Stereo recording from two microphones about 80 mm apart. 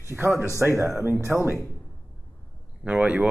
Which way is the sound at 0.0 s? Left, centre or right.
Right.